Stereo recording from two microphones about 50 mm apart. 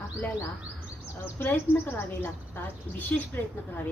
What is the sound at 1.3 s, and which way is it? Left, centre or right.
A woman's voice, left.